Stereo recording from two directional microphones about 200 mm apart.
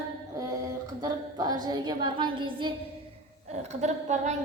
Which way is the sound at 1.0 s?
20° right (ahead or behind).